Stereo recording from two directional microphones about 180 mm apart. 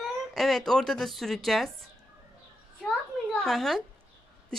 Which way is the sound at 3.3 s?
Centre (ahead or behind).